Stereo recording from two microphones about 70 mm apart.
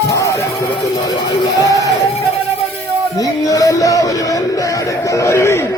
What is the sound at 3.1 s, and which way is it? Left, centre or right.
Music, left.